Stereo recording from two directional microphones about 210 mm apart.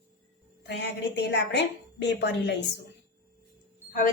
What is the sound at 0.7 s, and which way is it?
A woman's voice, 55° left (ahead or behind).